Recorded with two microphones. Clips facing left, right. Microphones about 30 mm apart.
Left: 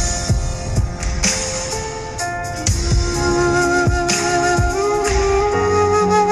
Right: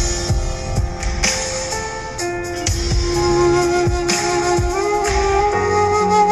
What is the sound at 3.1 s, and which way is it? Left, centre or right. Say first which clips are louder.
Music: right 2 dB; centre.